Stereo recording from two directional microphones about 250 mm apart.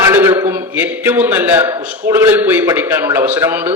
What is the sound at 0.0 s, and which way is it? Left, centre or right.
A man's voice, centre.